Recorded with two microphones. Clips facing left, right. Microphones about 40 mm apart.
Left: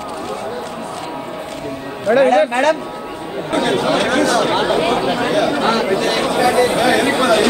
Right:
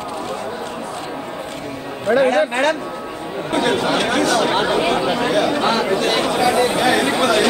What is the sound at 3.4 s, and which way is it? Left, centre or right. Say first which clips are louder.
Speech: left 2 dB; centre.